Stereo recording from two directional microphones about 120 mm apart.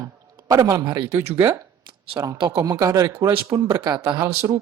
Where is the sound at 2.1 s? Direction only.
40° right (ahead or behind).